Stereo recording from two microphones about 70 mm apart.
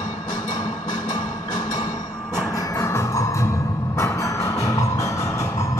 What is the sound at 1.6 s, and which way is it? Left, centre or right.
Music, left.